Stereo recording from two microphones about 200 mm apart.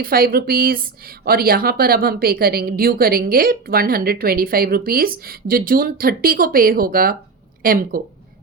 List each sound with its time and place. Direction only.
0.0 s a woman's voice: 45° right (ahead or behind)